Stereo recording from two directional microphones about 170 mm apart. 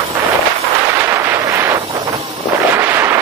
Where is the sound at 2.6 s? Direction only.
15° right (ahead or behind).